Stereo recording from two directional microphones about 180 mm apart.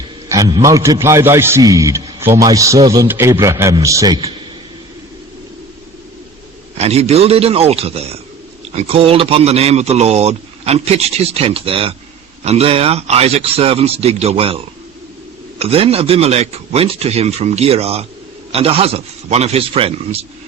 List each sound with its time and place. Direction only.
0.3 s a man's voice: 20° right (ahead or behind)
6.7 s a man's voice: 35° right (ahead or behind)